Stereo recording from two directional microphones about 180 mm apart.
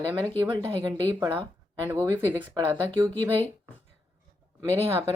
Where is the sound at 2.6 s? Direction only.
30° right (ahead or behind).